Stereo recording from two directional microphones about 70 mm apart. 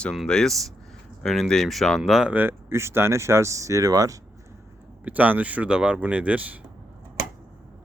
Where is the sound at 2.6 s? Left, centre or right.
Right.